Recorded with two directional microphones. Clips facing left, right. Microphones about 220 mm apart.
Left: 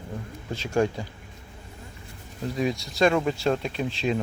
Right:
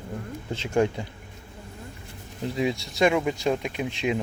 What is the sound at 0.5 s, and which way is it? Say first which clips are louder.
Speech: right 1 dB; 20° right (ahead or behind).